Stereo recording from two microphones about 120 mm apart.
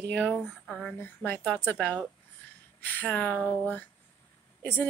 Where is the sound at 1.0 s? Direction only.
15° left (ahead or behind).